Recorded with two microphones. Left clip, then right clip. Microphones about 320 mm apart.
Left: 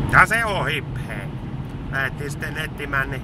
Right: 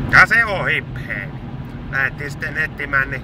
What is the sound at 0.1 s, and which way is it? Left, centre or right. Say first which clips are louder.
Speech: right 4 dB; centre.